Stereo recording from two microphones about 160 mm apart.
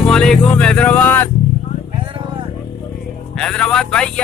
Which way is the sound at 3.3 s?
5° left (ahead or behind).